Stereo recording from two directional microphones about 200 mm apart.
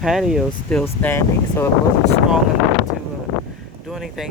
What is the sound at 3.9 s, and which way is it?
Speech, centre (ahead or behind).